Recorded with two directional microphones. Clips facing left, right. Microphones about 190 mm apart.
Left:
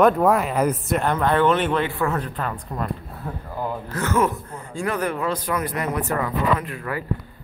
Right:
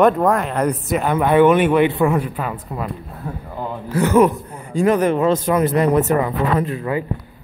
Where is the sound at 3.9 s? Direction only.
15° right (ahead or behind).